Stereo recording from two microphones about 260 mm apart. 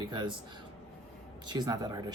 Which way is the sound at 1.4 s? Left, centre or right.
Centre.